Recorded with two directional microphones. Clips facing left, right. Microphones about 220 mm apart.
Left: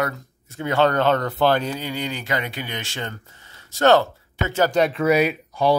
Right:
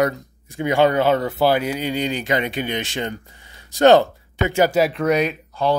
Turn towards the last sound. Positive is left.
turn(degrees=10)  # may be behind; listen again after turning